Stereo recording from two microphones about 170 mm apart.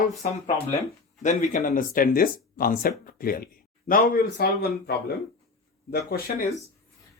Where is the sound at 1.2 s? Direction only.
50° left (ahead or behind).